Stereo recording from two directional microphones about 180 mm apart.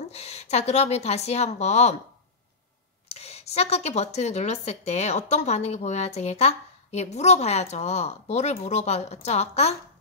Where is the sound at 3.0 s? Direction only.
35° left (ahead or behind).